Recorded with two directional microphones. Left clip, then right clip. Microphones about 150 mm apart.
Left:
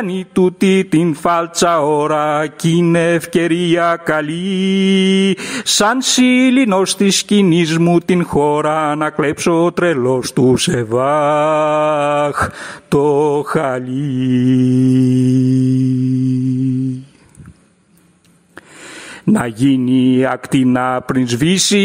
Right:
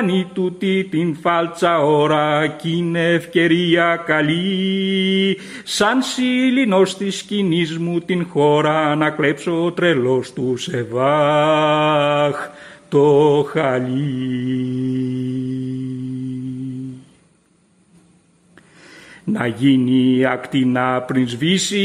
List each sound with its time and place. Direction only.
0.0 s mantra: 40° left (ahead or behind)
19.2 s mantra: 35° left (ahead or behind)